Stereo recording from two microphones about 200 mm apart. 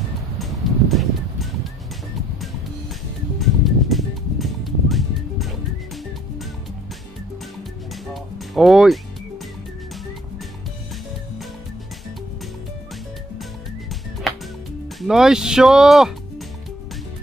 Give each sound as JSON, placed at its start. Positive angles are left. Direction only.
{"t": 0.4, "sound": "music", "side_deg": 0}
{"t": 3.3, "sound": "music", "side_deg": 0}
{"t": 8.1, "sound": "music", "side_deg": 0}
{"t": 14.3, "sound": "music", "side_deg": 0}
{"t": 15.0, "sound": "speech", "side_deg": 0}